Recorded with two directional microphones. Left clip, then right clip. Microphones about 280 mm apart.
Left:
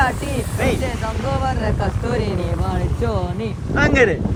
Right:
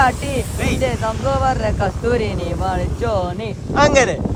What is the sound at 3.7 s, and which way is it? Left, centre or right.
Speech, right.